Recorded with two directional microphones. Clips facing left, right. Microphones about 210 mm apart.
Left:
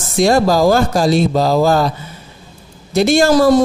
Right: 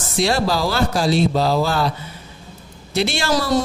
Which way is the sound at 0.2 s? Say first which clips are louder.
Left 7 dB; 45° left (ahead or behind).